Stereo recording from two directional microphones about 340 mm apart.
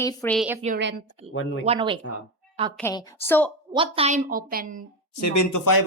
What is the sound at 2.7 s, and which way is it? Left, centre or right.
Speech, centre.